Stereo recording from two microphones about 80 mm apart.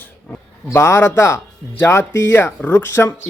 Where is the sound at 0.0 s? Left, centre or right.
Left.